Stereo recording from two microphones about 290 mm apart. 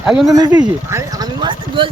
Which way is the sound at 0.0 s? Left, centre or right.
Centre.